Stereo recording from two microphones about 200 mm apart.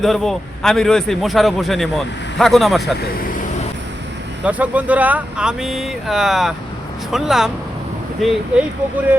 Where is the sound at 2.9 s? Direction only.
45° left (ahead or behind).